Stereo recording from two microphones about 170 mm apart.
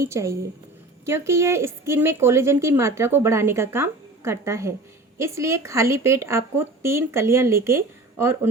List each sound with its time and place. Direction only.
0.0 s a woman's voice: 15° right (ahead or behind)